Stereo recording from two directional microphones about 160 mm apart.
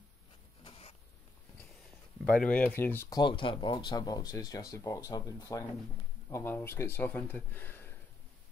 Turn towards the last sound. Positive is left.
turn(degrees=10)  # may be behind; listen again after turning